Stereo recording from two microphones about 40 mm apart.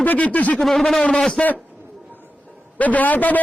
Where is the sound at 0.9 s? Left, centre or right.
Left.